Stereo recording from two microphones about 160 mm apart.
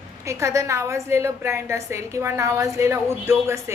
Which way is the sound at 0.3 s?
20° right (ahead or behind).